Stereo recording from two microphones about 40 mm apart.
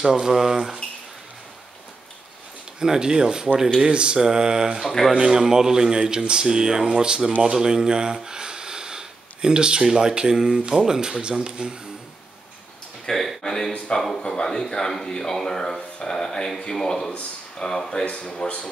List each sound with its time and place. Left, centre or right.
0.0 s speech: centre
2.8 s speech: centre
4.8 s speech: centre
5.2 s speech: centre
13.1 s speech: centre
16.0 s a sound: centre
16.7 s speech: centre
18.0 s speech: left